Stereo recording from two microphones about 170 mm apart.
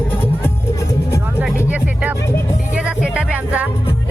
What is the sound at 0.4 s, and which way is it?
Music, 15° left (ahead or behind).